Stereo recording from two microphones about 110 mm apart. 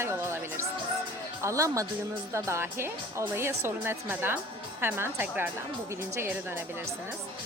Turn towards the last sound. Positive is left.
turn(degrees=-20)  # may be behind; listen again after turning